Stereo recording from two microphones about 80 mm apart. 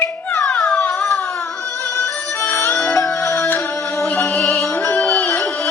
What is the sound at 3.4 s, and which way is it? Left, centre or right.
Music, left.